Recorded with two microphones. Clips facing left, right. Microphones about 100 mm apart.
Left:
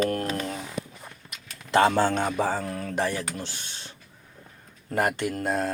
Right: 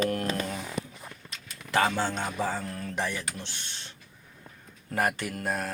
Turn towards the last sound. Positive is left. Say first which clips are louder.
# left 5 dB
turn(degrees=25)  # may be behind; listen again after turning